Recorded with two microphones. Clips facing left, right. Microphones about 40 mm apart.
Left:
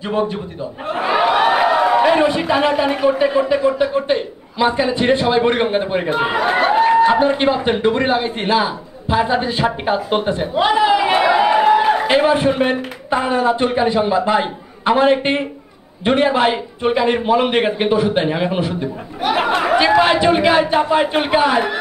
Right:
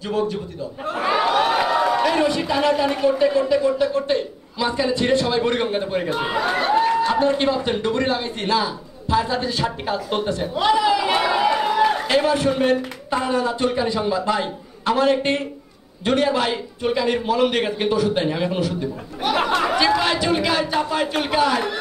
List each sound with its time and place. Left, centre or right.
0.1 s a man's voice: left
0.9 s a sound: centre
1.2 s a man's voice: left